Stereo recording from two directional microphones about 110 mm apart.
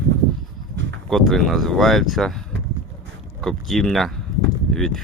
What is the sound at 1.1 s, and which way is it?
Speech, centre (ahead or behind).